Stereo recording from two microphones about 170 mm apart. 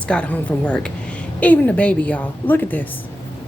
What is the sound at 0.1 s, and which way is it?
A woman's voice, 5° left (ahead or behind).